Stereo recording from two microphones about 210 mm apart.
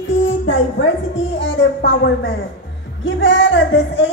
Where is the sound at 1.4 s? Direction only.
55° left (ahead or behind).